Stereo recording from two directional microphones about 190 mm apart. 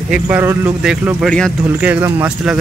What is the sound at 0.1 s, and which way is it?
Speech, 10° right (ahead or behind).